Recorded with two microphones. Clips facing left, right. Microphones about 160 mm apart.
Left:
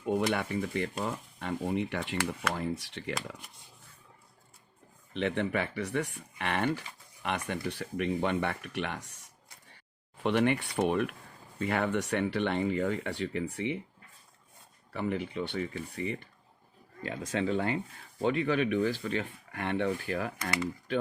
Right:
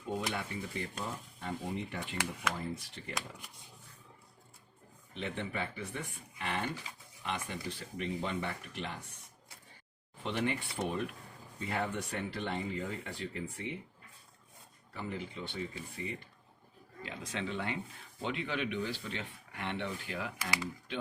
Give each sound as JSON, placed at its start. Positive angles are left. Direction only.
{"t": 0.0, "sound": "speech", "side_deg": 65}
{"t": 5.1, "sound": "speech", "side_deg": 70}
{"t": 10.2, "sound": "speech", "side_deg": 65}
{"t": 14.9, "sound": "speech", "side_deg": 65}
{"t": 17.0, "sound": "speech", "side_deg": 45}